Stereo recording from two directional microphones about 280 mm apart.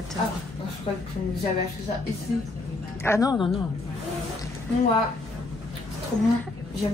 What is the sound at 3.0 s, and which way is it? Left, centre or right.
Speech, centre.